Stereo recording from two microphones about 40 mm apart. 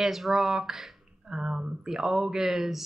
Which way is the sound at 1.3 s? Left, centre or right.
Right.